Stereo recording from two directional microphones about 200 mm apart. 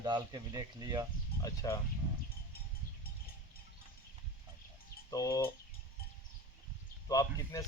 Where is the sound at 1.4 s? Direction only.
15° left (ahead or behind).